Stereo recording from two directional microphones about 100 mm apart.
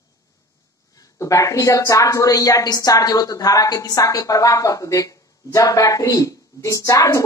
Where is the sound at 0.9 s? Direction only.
35° left (ahead or behind).